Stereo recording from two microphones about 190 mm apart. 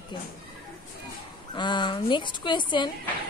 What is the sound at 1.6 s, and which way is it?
A woman's voice, 25° left (ahead or behind).